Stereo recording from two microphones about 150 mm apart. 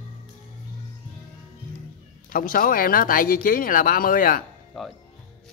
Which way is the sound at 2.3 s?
70° left (ahead or behind).